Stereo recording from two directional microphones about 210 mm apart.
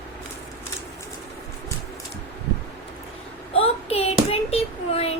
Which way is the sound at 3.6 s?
30° left (ahead or behind).